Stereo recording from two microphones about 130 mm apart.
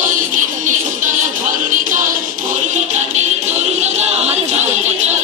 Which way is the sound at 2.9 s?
60° right (ahead or behind).